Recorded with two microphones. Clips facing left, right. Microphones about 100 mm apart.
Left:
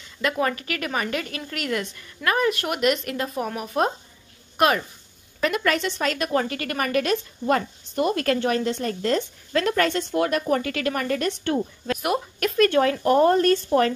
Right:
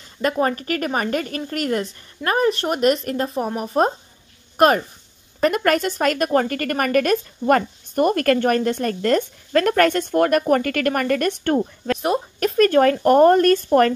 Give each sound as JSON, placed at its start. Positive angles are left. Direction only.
{"t": 0.2, "sound": "a woman's voice", "side_deg": -40}
{"t": 11.9, "sound": "a woman's voice", "side_deg": -35}